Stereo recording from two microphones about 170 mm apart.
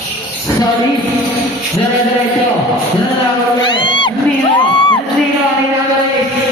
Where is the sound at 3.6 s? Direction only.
30° left (ahead or behind).